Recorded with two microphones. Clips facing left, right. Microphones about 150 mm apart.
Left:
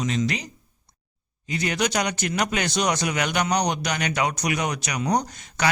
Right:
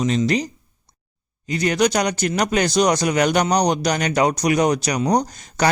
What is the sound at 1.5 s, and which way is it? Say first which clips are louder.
Speech: right 6 dB; 40° right (ahead or behind).